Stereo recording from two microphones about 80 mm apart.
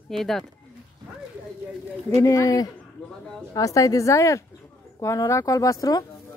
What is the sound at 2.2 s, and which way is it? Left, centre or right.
Speech, left.